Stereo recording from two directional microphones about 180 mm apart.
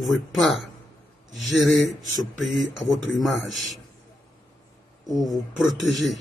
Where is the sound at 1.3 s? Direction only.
90° left.